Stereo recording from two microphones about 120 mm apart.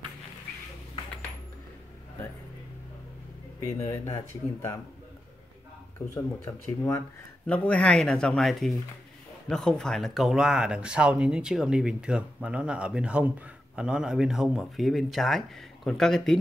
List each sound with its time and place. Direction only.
3.5 s speech: 20° left (ahead or behind)
5.9 s speech: 15° left (ahead or behind)